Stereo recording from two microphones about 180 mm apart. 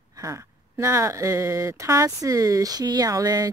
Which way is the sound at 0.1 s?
20° right (ahead or behind).